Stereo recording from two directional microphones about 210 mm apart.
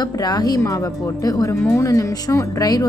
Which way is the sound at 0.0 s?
20° left (ahead or behind).